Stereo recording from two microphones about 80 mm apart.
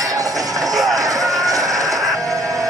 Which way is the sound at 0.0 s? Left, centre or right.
Right.